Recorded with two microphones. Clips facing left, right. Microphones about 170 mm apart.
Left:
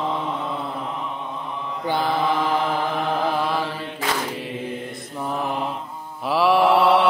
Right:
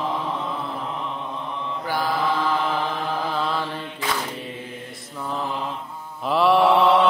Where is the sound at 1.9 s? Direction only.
20° left (ahead or behind).